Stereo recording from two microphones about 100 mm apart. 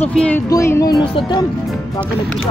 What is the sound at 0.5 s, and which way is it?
Child singing, 35° left (ahead or behind).